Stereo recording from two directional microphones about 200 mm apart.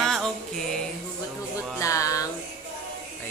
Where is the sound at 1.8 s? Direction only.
15° left (ahead or behind).